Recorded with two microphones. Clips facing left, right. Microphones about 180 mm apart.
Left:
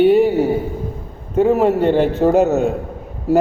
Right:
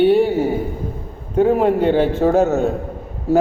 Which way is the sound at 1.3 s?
5° left (ahead or behind).